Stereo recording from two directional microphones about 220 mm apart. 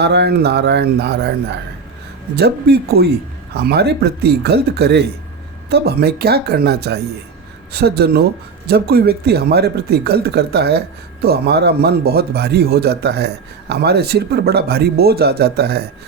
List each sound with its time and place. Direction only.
0.0 s speech: 50° right (ahead or behind)